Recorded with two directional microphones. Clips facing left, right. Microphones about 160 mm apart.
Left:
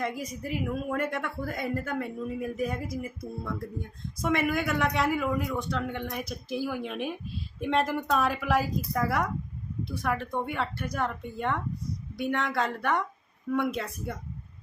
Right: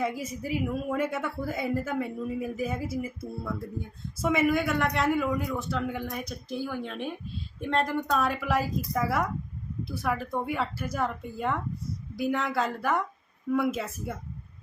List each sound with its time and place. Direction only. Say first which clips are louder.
0.0 s a woman's voice: right 2 dB; 5° right (ahead or behind)